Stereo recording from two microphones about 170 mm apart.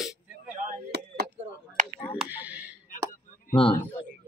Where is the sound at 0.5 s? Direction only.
55° right (ahead or behind).